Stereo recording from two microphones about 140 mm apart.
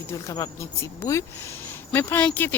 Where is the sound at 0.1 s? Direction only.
25° left (ahead or behind).